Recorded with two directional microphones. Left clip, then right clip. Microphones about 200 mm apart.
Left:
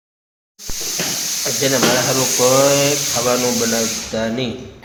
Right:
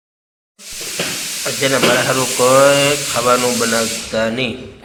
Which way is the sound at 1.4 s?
10° left (ahead or behind).